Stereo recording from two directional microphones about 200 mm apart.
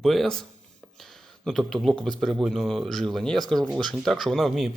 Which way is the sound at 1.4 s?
Centre (ahead or behind).